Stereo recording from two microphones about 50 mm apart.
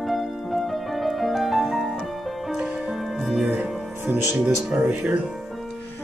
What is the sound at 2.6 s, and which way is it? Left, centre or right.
Music, centre.